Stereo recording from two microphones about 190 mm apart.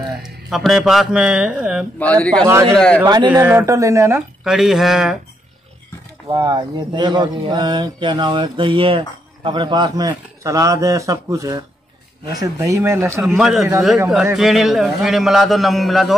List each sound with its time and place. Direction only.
0.2 s a man's voice: centre (ahead or behind)
2.0 s a man's voice: 5° left (ahead or behind)
3.0 s speech: 20° right (ahead or behind)
4.5 s a man's voice: centre (ahead or behind)
6.2 s speech: 20° right (ahead or behind)
13.4 s a man's voice: centre (ahead or behind)